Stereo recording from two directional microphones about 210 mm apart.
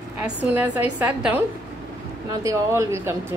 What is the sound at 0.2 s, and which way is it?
A woman's voice, 10° right (ahead or behind).